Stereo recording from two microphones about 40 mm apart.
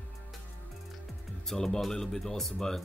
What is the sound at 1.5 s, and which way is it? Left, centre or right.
Speech, centre.